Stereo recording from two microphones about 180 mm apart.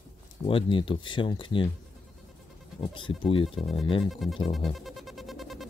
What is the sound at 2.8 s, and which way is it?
Speech, 30° left (ahead or behind).